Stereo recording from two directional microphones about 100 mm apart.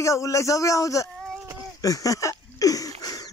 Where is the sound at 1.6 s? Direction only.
35° left (ahead or behind).